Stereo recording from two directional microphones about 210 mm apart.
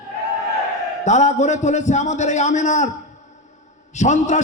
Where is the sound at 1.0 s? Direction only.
35° left (ahead or behind).